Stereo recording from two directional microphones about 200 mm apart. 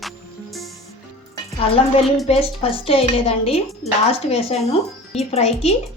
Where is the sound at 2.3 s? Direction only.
30° left (ahead or behind).